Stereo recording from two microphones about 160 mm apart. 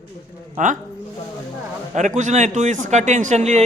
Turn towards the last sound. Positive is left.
turn(degrees=-45)  # may be behind; listen again after turning